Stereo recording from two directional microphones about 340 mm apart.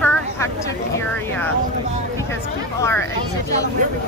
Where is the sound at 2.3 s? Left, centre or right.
Centre.